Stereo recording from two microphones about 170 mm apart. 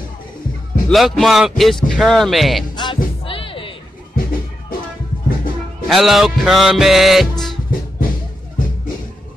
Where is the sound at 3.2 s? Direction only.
30° left (ahead or behind).